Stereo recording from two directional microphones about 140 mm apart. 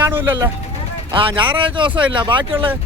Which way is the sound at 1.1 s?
35° right (ahead or behind).